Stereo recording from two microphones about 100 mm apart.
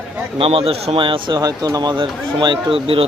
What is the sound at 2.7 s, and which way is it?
Speech, 70° right (ahead or behind).